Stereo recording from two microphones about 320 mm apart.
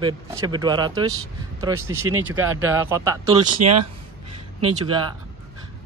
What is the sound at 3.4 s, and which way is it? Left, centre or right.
Speech, right.